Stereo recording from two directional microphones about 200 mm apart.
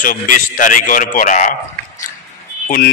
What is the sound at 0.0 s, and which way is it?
A man's voice, 40° left (ahead or behind).